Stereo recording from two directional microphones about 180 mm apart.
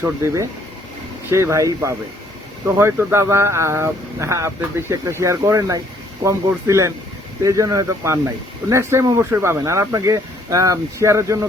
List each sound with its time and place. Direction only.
0.0 s speech: 15° right (ahead or behind)